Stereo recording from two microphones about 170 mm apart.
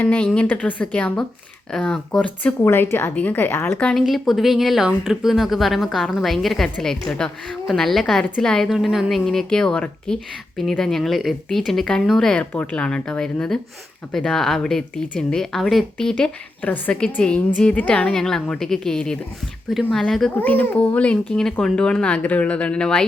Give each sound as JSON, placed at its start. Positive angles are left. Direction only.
{"t": 0.0, "sound": "a child's voice", "side_deg": 10}